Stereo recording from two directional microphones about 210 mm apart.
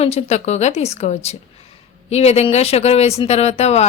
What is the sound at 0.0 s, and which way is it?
Speech, 30° left (ahead or behind).